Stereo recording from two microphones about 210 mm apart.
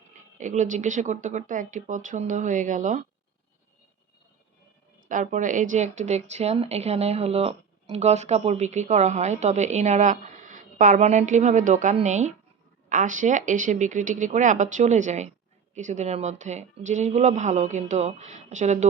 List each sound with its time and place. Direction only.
0.3 s speech: 35° right (ahead or behind)
5.0 s speech: 35° right (ahead or behind)